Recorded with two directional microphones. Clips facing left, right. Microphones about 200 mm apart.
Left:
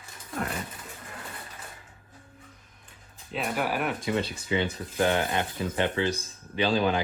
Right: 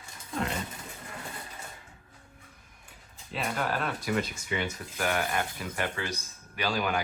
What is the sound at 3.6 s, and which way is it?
Speech, 10° left (ahead or behind).